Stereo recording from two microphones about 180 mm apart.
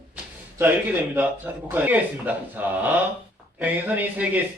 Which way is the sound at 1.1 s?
10° right (ahead or behind).